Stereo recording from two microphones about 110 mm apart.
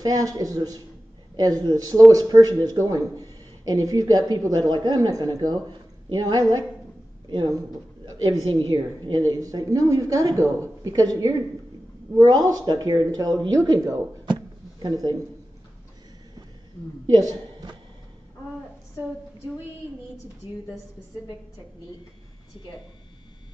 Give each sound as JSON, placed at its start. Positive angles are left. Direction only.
{"t": 0.0, "sound": "speech", "side_deg": -35}
{"t": 14.2, "sound": "a sound", "side_deg": -45}
{"t": 17.1, "sound": "a woman's voice", "side_deg": -35}